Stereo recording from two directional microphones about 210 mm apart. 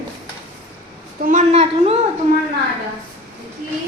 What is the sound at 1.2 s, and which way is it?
Speech, 35° right (ahead or behind).